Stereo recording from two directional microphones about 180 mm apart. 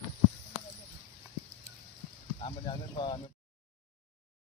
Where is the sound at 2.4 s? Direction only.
25° left (ahead or behind).